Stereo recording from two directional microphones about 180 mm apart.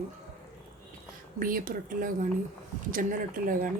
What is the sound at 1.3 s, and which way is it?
A woman's voice, 50° right (ahead or behind).